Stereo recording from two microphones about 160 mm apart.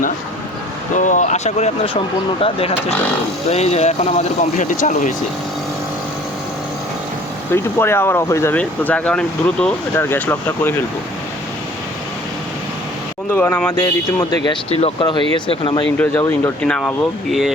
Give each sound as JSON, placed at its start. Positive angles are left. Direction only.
{"t": 0.9, "sound": "speech", "side_deg": 50}
{"t": 7.5, "sound": "speech", "side_deg": 15}
{"t": 13.3, "sound": "speech", "side_deg": 10}
{"t": 14.4, "sound": "speech", "side_deg": 35}
{"t": 16.0, "sound": "speech", "side_deg": 10}